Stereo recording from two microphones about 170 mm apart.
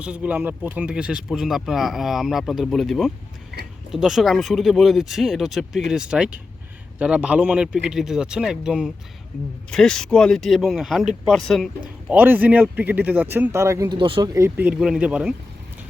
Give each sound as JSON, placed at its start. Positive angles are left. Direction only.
{"t": 0.0, "sound": "speech", "side_deg": -10}
{"t": 14.3, "sound": "speech", "side_deg": -10}